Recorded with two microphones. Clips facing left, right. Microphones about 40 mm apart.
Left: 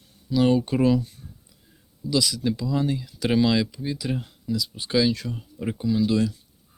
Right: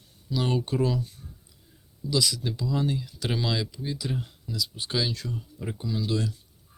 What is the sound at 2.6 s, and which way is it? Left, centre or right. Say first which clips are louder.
Speech: left 3 dB; left.